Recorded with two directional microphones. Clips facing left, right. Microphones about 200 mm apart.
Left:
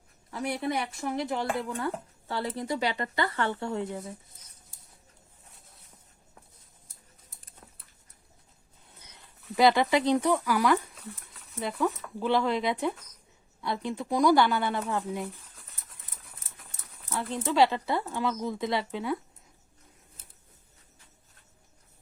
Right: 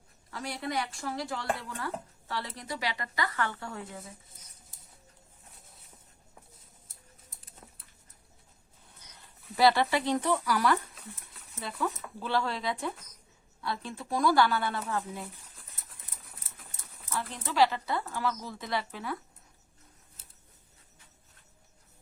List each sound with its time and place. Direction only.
0.3 s speech: 20° left (ahead or behind)
9.6 s speech: 15° left (ahead or behind)
12.2 s speech: 20° left (ahead or behind)
17.1 s speech: 20° left (ahead or behind)